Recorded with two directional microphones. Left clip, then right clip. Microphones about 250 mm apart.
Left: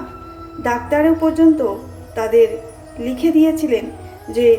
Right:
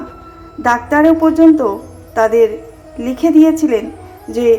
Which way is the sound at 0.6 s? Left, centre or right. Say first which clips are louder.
Right 5 dB; centre.